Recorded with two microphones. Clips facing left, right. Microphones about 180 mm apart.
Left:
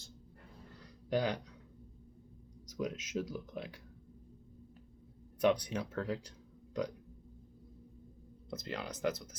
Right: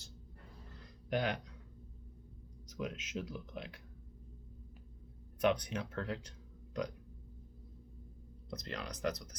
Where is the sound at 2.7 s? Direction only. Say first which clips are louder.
Left 3 dB; 35° left (ahead or behind).